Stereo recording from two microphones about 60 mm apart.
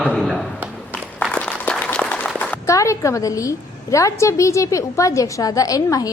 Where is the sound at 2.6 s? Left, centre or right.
Left.